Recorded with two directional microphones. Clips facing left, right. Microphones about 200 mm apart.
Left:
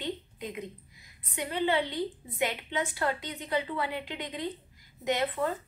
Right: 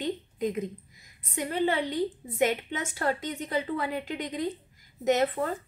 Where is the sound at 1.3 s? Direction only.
45° right (ahead or behind).